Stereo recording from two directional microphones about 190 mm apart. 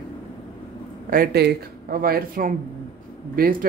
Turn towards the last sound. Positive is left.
turn(degrees=-45)  # may be behind; listen again after turning